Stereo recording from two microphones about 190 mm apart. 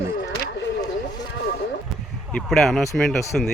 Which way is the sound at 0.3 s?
65° left (ahead or behind).